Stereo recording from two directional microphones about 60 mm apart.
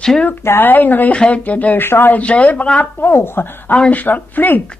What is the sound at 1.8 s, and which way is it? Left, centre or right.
Speech, left.